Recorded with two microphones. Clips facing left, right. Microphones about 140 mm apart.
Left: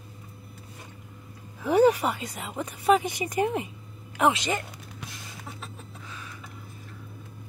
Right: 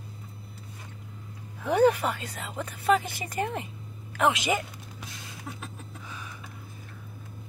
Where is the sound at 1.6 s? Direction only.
10° left (ahead or behind).